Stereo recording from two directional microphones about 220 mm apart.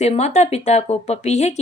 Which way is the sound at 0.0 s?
30° left (ahead or behind).